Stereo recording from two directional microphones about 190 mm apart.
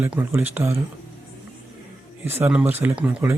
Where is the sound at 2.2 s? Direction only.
10° right (ahead or behind).